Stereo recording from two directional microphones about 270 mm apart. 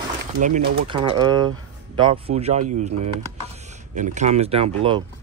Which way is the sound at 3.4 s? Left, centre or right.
Right.